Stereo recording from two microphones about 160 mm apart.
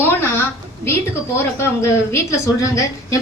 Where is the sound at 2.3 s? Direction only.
20° left (ahead or behind).